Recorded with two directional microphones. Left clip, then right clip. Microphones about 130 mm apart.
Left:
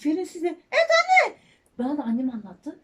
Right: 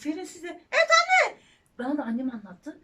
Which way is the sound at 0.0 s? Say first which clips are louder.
Left 8 dB; 35° left (ahead or behind).